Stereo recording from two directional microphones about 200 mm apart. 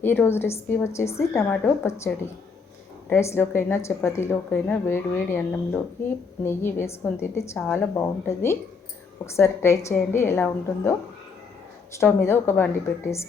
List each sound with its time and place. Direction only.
0.0 s a woman's voice: 10° left (ahead or behind)
3.1 s a woman's voice: 10° left (ahead or behind)
11.9 s a woman's voice: 15° left (ahead or behind)